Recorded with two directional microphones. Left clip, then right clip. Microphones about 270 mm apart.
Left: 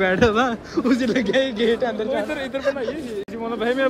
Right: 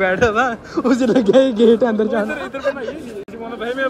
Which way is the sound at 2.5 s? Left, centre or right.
Left.